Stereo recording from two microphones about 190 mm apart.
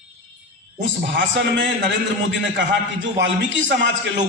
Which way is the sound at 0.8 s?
75° right (ahead or behind).